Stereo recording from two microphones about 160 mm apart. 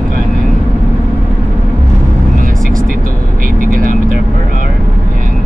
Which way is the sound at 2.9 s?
60° right (ahead or behind).